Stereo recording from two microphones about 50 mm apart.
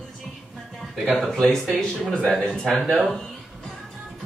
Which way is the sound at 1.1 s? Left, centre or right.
Centre.